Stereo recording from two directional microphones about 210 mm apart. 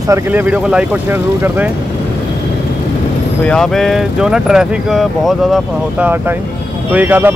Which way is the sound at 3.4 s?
5° left (ahead or behind).